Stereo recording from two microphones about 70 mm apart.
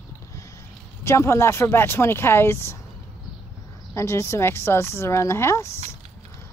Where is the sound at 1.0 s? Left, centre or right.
Left.